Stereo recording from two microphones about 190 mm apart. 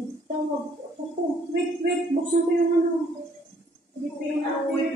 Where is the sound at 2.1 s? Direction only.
35° right (ahead or behind).